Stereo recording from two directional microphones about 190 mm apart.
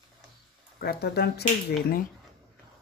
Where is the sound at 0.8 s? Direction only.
55° left (ahead or behind).